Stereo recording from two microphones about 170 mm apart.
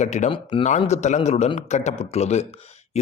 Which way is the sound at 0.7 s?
40° left (ahead or behind).